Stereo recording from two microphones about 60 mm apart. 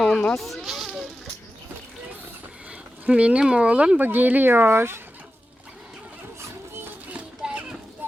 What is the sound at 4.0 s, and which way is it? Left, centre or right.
Speech, right.